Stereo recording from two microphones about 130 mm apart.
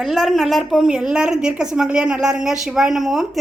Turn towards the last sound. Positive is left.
turn(degrees=-5)  # may be behind; listen again after turning